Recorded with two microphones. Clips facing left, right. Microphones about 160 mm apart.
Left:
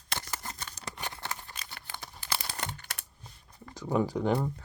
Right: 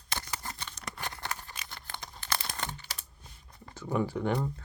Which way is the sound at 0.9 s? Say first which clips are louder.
Even; 20° left (ahead or behind).